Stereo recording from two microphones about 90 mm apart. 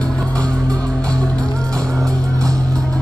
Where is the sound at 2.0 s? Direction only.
40° right (ahead or behind).